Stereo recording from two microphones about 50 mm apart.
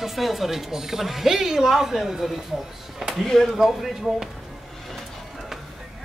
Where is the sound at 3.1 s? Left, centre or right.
Centre.